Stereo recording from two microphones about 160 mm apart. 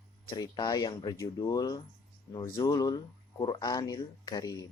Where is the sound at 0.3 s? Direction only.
25° left (ahead or behind).